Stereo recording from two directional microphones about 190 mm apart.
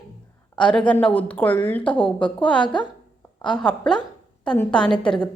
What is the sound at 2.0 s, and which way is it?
Speech, 25° left (ahead or behind).